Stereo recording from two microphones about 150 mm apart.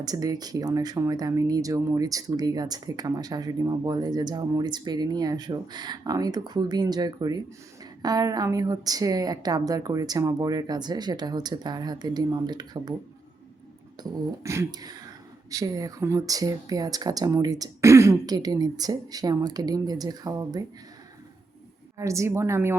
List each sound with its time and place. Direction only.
0.0 s speech: 25° right (ahead or behind)
14.0 s speech: 20° right (ahead or behind)
21.9 s speech: 20° right (ahead or behind)